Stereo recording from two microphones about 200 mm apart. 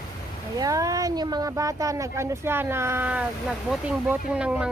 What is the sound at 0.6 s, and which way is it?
Speech, 15° right (ahead or behind).